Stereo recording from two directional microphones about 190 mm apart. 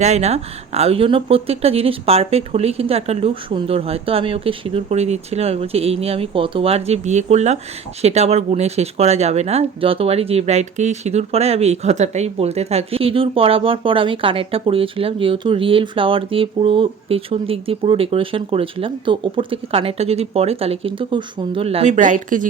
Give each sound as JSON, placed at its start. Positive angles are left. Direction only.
{"t": 0.0, "sound": "speech", "side_deg": -35}